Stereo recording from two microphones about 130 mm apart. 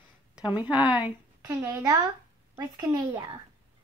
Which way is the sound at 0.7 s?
10° right (ahead or behind).